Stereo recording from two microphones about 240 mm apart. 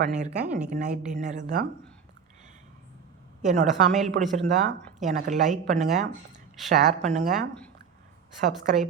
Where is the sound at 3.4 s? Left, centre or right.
Right.